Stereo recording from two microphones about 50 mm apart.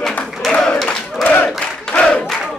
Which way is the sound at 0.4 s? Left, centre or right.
Centre.